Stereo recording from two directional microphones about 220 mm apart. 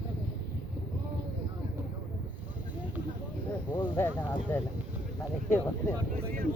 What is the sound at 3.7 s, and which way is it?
Speech, 10° left (ahead or behind).